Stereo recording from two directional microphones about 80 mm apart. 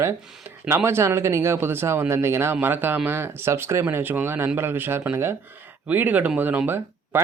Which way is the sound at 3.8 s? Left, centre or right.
Right.